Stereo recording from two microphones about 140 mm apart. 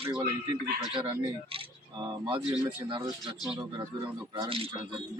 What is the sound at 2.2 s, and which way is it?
Speech, 35° right (ahead or behind).